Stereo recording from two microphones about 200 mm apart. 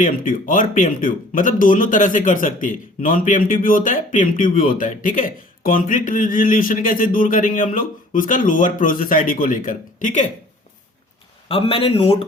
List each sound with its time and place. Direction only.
0.0 s speech: 40° left (ahead or behind)
11.4 s a man's voice: 25° left (ahead or behind)